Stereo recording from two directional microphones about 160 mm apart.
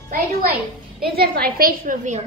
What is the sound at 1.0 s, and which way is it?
A woman's voice, 75° right (ahead or behind).